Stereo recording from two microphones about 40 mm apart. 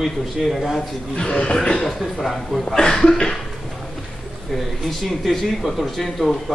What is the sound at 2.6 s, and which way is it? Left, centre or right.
Speech, centre.